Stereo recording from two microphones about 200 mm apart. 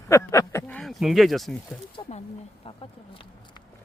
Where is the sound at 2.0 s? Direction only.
30° left (ahead or behind).